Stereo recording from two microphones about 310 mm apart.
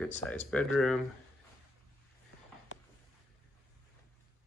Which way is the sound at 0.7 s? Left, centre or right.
Centre.